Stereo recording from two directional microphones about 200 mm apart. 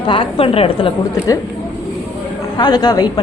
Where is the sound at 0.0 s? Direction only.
25° left (ahead or behind).